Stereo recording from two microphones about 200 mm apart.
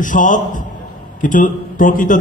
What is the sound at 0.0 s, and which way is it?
A man's voice, 40° left (ahead or behind).